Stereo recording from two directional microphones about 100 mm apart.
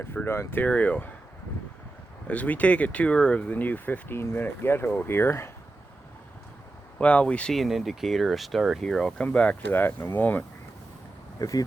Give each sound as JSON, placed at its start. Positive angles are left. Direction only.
{"t": 0.3, "sound": "speech", "side_deg": 20}
{"t": 2.2, "sound": "speech", "side_deg": 15}
{"t": 7.0, "sound": "speech", "side_deg": 10}
{"t": 11.3, "sound": "speech", "side_deg": 35}